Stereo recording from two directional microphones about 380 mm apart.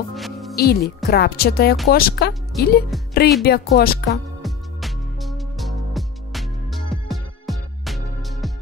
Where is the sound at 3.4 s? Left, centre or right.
Left.